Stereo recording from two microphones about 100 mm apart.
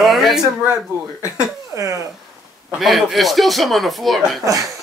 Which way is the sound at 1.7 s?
30° right (ahead or behind).